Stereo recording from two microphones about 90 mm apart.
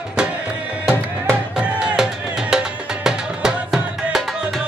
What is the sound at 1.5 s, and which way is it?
Music, 10° right (ahead or behind).